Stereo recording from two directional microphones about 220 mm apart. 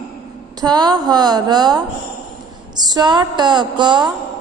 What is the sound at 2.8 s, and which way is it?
A woman's voice, 20° right (ahead or behind).